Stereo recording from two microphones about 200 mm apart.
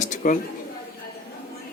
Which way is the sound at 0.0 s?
40° left (ahead or behind).